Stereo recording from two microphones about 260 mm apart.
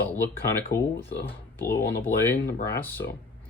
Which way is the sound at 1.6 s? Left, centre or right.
Left.